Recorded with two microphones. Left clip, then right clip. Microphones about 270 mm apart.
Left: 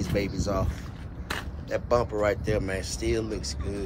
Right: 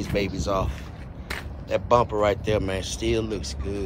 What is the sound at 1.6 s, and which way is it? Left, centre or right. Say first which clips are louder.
Speech: right 5 dB; centre.